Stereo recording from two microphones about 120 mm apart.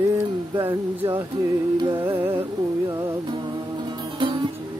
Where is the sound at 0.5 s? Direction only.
20° right (ahead or behind).